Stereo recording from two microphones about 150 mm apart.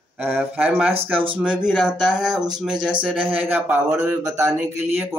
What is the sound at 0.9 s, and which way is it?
Speech, 35° right (ahead or behind).